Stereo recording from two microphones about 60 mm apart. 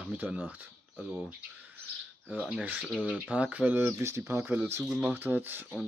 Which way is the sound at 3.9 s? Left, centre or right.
Right.